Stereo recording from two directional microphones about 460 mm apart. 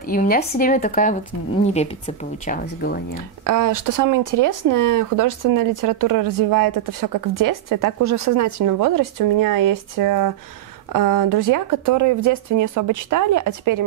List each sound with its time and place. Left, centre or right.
0.0 s speech: centre
3.4 s speech: right